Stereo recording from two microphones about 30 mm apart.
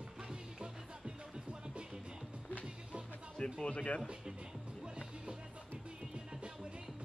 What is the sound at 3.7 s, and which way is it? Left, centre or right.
Speech, left.